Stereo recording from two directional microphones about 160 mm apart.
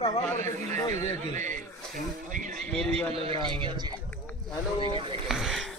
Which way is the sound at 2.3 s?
55° right (ahead or behind).